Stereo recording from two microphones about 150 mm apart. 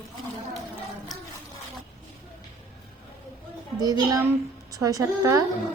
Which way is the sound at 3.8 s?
25° right (ahead or behind).